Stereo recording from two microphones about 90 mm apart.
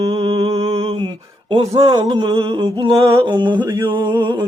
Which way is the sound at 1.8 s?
65° right (ahead or behind).